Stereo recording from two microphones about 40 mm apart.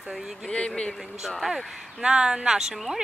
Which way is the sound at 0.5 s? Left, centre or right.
Left.